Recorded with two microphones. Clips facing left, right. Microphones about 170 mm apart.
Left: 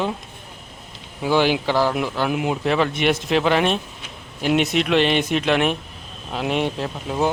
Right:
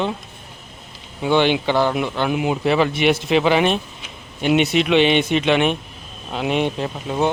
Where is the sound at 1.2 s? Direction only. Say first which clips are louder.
Right 2 dB; 5° left (ahead or behind).